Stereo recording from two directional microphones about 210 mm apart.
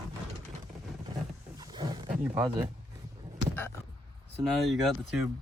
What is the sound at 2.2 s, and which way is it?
Speech, 10° right (ahead or behind).